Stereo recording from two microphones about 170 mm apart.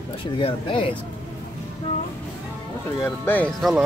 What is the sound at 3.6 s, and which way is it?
Speech, centre (ahead or behind).